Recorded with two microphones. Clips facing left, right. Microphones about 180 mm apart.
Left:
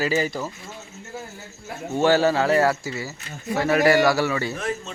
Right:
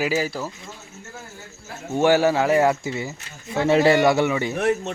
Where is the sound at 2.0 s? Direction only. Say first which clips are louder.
Right 1 dB; 15° right (ahead or behind).